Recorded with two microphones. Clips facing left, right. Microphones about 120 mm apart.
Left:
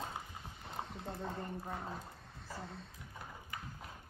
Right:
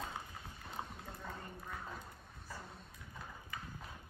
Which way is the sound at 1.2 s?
25° left (ahead or behind).